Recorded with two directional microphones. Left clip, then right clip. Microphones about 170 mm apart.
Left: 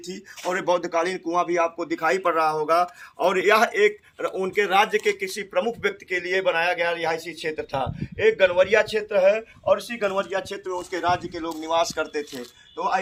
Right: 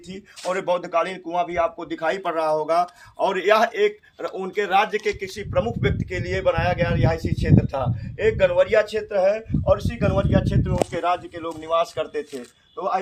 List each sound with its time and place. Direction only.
0.1 s speech: 55° right (ahead or behind)